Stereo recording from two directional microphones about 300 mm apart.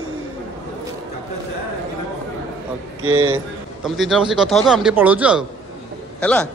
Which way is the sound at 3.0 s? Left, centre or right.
Right.